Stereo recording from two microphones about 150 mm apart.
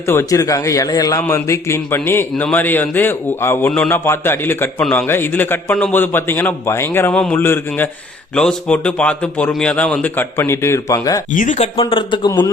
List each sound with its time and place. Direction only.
0.0 s a man's voice: 15° left (ahead or behind)
11.3 s speech: 55° left (ahead or behind); by 12.3 s 35° left (ahead or behind)